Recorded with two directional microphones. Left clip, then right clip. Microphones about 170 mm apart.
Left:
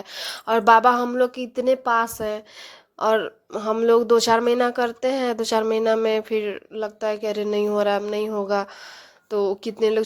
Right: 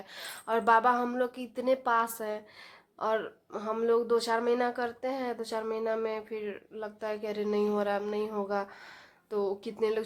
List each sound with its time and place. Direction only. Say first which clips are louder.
0.1 s speech: left 9 dB; 40° left (ahead or behind)